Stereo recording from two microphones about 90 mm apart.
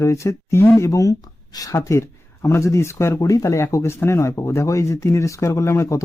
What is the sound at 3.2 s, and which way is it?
Speech, 40° left (ahead or behind).